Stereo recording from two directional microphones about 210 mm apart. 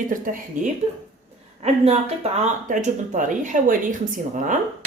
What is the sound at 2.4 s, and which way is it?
Speech, 35° right (ahead or behind).